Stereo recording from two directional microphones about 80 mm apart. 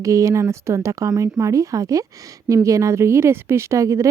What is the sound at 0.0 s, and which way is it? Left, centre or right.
A woman's voice, right.